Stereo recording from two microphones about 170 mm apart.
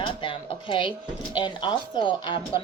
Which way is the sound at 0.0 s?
30° left (ahead or behind).